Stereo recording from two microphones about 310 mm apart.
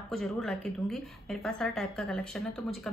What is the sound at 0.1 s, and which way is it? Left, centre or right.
A woman's voice, centre.